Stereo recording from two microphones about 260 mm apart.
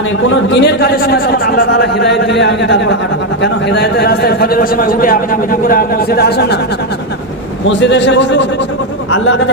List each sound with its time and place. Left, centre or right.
0.3 s a man's voice: left
7.6 s a man's voice: left